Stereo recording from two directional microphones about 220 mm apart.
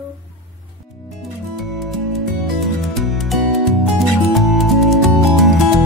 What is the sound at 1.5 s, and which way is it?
Music, centre (ahead or behind).